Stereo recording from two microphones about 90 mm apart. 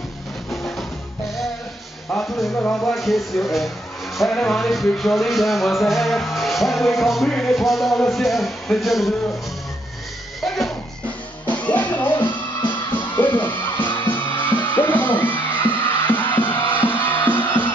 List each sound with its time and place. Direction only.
0.5 s music: 5° left (ahead or behind)
2.1 s music: centre (ahead or behind)
2.5 s speech: 20° left (ahead or behind)
2.9 s music: centre (ahead or behind)
11.4 s music: 15° left (ahead or behind)